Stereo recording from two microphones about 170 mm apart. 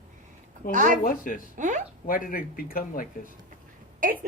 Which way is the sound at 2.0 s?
55° left (ahead or behind).